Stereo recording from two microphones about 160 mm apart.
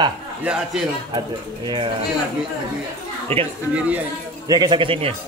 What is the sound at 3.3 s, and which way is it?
Speech, 35° right (ahead or behind).